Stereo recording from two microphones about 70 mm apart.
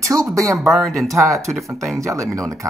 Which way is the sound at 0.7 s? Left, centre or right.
Centre.